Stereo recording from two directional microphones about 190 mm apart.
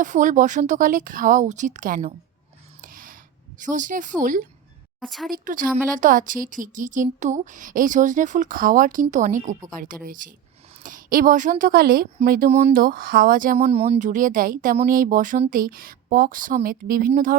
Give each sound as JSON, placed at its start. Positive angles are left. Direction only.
{"t": 0.0, "sound": "speech", "side_deg": -40}
{"t": 2.8, "sound": "a sound", "side_deg": -45}
{"t": 3.6, "sound": "speech", "side_deg": -40}
{"t": 4.9, "sound": "a woman's voice", "side_deg": 0}
{"t": 5.3, "sound": "speech", "side_deg": -45}